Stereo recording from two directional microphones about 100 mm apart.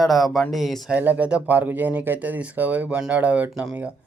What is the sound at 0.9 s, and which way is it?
Speech, 15° right (ahead or behind).